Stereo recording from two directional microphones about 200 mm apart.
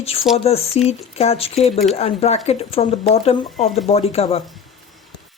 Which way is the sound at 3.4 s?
Centre (ahead or behind).